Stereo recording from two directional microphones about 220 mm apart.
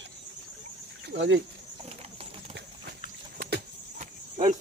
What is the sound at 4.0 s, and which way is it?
Cricket, 35° right (ahead or behind).